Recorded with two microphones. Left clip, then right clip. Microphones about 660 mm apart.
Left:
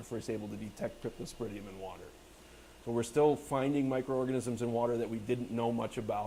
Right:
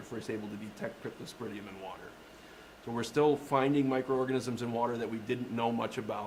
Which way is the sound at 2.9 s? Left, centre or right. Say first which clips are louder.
Even; left.